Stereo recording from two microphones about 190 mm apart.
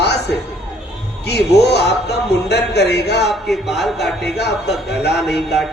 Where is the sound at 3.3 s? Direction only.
Centre (ahead or behind).